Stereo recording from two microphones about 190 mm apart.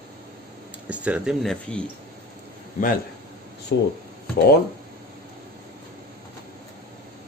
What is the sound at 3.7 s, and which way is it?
Speech, 65° left (ahead or behind).